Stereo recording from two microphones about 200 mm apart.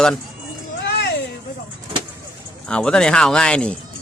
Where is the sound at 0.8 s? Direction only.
55° left (ahead or behind).